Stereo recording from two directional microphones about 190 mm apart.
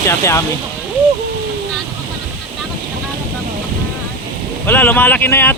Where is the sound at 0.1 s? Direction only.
15° left (ahead or behind).